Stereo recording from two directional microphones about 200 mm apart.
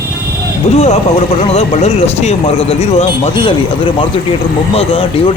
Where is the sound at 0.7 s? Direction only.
35° left (ahead or behind).